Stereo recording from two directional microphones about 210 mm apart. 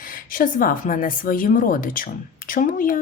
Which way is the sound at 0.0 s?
40° left (ahead or behind).